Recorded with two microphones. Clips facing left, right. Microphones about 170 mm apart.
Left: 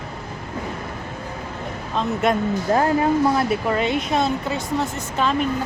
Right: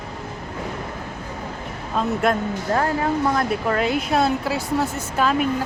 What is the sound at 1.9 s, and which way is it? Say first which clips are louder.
Speech: even; centre (ahead or behind).